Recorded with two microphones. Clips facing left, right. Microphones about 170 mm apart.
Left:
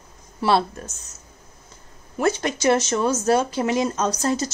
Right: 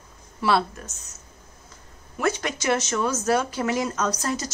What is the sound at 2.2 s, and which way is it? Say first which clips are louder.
Speech: left 4 dB; 30° left (ahead or behind).